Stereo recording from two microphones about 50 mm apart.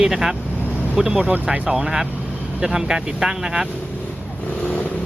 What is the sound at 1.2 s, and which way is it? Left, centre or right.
Speech, right.